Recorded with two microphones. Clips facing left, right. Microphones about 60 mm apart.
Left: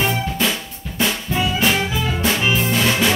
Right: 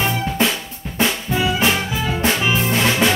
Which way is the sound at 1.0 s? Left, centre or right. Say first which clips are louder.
Right 1 dB; right.